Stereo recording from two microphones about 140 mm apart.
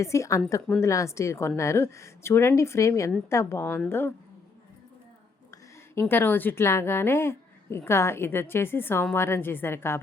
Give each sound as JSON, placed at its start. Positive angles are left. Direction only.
{"t": 0.0, "sound": "a woman's voice", "side_deg": 20}
{"t": 5.5, "sound": "a woman's voice", "side_deg": 15}